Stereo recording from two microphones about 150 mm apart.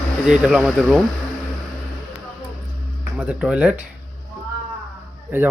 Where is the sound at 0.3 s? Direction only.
Centre (ahead or behind).